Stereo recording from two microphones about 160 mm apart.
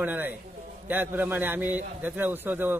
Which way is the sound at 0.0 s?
10° right (ahead or behind).